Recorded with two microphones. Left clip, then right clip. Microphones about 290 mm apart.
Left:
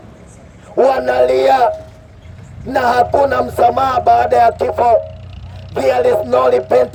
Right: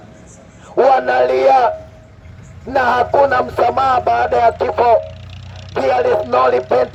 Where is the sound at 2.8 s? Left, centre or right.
Right.